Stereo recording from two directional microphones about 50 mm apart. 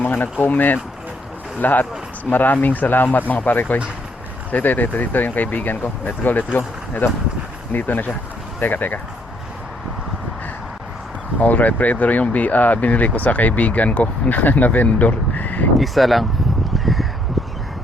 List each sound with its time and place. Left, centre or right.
0.0 s speech: left
11.3 s speech: left
15.8 s speech: centre
16.7 s crow: centre
17.4 s a sound: centre